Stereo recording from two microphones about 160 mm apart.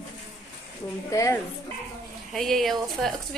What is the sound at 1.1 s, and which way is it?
Speech, 20° left (ahead or behind).